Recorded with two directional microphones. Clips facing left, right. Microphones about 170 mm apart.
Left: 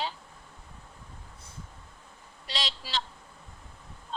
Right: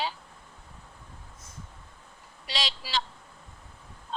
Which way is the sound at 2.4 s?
90° right.